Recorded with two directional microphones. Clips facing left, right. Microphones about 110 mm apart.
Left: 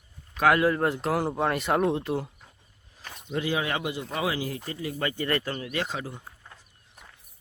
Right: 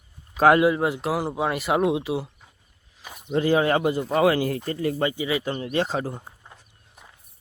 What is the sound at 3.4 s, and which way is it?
Speech, 40° right (ahead or behind).